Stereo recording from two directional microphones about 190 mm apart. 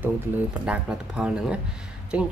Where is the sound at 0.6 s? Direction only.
5° right (ahead or behind).